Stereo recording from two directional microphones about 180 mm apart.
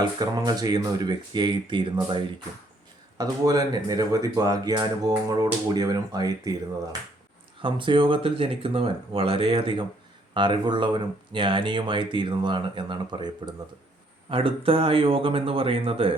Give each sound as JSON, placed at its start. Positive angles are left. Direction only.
{"t": 0.0, "sound": "speech", "side_deg": -20}
{"t": 7.6, "sound": "speech", "side_deg": -25}